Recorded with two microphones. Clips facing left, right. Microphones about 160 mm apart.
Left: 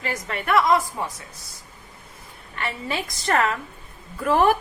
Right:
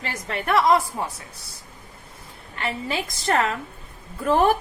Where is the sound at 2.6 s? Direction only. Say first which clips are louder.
Right 1 dB; 25° right (ahead or behind).